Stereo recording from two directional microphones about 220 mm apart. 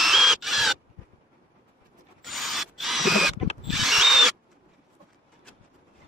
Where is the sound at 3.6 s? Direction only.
Centre (ahead or behind).